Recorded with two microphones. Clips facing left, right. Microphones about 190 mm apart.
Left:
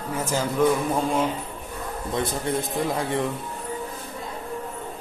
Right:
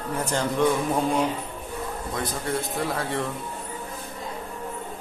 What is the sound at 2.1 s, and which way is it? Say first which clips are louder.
A man's voice: left 4 dB; 20° left (ahead or behind).